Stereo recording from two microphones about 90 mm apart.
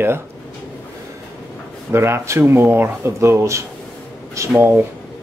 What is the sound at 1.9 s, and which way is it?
Speech, 30° right (ahead or behind).